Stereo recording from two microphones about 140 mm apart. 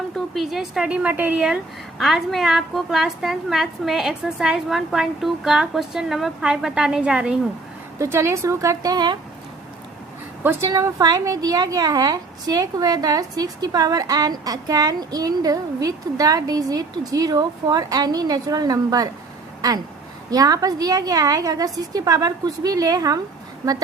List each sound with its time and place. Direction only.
0.3 s a woman's voice: 5° right (ahead or behind)
7.9 s a woman's voice: 20° right (ahead or behind)
10.7 s a woman's voice: 20° right (ahead or behind)
20.3 s a woman's voice: 25° right (ahead or behind)